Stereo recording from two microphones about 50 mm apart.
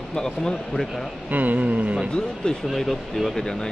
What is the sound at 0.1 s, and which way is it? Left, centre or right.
Speech, centre.